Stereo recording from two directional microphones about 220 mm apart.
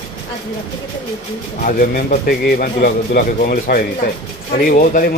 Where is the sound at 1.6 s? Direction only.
40° left (ahead or behind).